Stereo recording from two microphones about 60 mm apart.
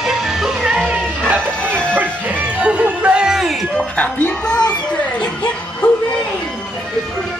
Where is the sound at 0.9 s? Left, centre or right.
Right.